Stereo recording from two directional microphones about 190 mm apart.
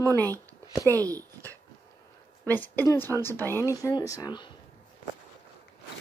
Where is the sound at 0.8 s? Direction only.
20° right (ahead or behind).